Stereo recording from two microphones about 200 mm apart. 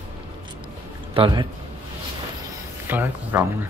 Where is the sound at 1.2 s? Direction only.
25° right (ahead or behind).